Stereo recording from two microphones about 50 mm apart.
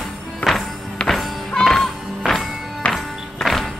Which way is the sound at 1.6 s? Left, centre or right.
Centre.